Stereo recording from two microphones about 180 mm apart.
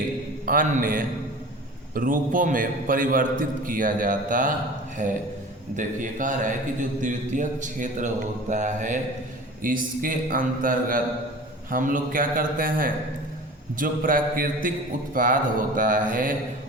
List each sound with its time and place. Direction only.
0.4 s a man's voice: 50° right (ahead or behind)